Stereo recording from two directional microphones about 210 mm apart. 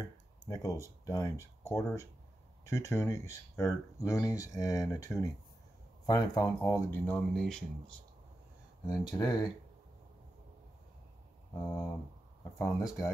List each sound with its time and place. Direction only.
0.5 s speech: 15° left (ahead or behind)
8.8 s speech: 20° left (ahead or behind)
11.6 s speech: 15° left (ahead or behind)